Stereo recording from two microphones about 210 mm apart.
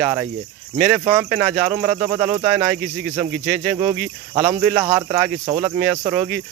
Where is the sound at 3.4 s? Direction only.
Centre (ahead or behind).